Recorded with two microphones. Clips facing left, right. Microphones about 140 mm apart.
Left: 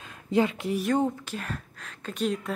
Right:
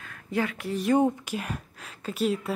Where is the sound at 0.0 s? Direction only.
20° left (ahead or behind).